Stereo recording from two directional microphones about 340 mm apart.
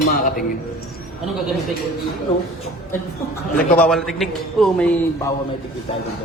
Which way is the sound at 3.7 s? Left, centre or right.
Centre.